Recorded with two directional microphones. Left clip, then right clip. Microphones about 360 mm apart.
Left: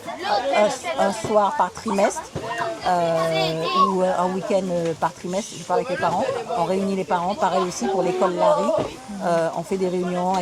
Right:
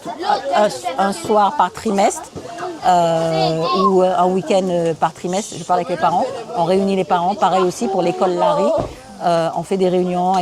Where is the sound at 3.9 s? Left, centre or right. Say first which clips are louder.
Right 7 dB; right.